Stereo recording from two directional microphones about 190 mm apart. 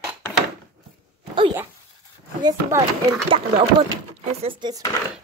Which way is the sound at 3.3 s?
30° right (ahead or behind).